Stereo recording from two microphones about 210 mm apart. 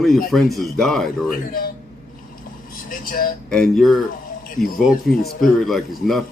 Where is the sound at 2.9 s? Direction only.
45° left (ahead or behind).